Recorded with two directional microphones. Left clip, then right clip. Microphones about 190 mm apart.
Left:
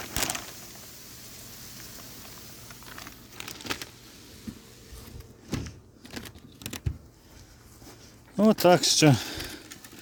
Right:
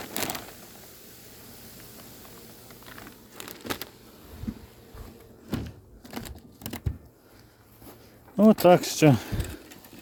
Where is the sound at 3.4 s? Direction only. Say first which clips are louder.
Even; 25° right (ahead or behind).